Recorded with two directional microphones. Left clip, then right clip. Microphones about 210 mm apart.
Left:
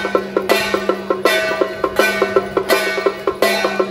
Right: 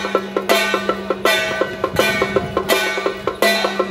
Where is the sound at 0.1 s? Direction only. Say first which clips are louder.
Even; 45° right (ahead or behind).